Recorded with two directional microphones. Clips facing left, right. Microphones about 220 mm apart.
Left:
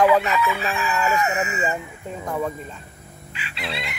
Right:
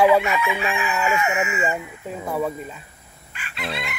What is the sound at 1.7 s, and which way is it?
Speech, 5° right (ahead or behind).